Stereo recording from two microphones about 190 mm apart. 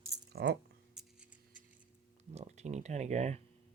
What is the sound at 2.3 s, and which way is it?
Speech, 35° right (ahead or behind).